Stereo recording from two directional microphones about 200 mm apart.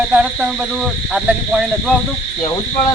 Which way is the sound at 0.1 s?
5° right (ahead or behind).